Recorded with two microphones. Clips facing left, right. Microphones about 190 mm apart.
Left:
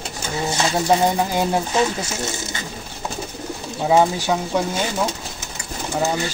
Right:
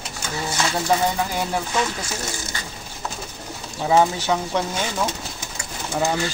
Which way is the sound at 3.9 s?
15° left (ahead or behind).